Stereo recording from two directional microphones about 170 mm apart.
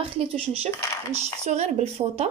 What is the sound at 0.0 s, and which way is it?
Speech, 35° right (ahead or behind).